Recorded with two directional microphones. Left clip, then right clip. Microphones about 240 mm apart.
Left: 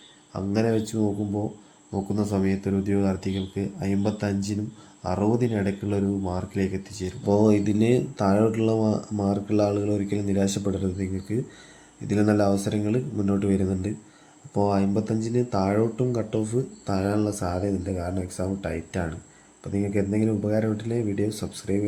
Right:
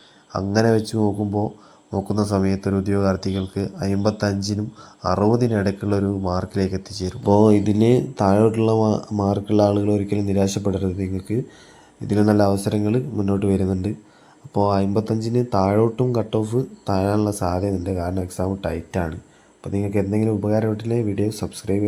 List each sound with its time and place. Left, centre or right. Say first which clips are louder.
0.3 s speech: right 6 dB; right
4.3 s speech: right 4 dB; centre
5.0 s speech: right 6 dB; centre